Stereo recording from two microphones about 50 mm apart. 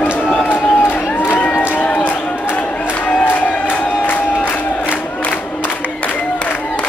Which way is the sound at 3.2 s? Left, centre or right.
Left.